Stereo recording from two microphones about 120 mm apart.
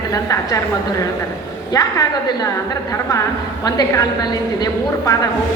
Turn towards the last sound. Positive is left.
turn(degrees=30)  # may be behind; listen again after turning